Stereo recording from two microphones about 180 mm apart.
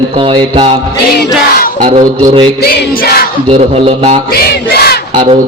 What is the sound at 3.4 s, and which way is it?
Speech, 30° right (ahead or behind).